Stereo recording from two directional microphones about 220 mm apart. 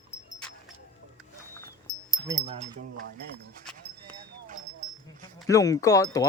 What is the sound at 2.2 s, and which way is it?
Speech, 15° right (ahead or behind).